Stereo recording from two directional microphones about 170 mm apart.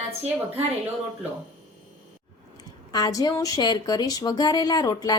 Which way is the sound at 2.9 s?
20° left (ahead or behind).